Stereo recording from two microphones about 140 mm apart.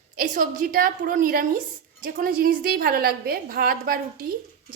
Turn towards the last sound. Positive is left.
turn(degrees=-90)